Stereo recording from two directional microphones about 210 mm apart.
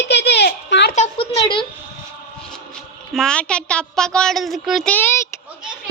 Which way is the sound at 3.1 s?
5° left (ahead or behind).